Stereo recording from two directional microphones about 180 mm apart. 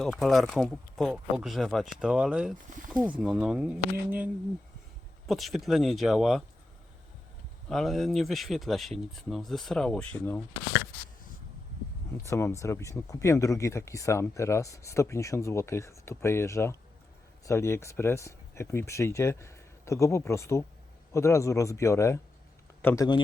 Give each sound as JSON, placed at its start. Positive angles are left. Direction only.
{"t": 0.0, "sound": "speech", "side_deg": 0}
{"t": 5.2, "sound": "speech", "side_deg": 0}
{"t": 7.7, "sound": "speech", "side_deg": 0}
{"t": 12.2, "sound": "a man's voice", "side_deg": 15}